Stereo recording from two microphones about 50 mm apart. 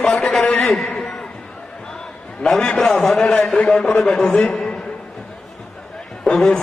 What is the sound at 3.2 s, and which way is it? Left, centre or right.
A man's voice, centre.